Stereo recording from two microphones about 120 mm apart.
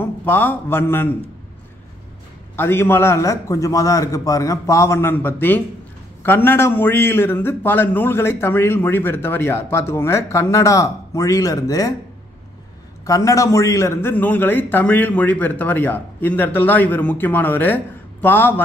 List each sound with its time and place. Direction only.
0.0 s a man's voice: 15° left (ahead or behind)
2.5 s a man's voice: 20° left (ahead or behind)
13.0 s a man's voice: 30° left (ahead or behind)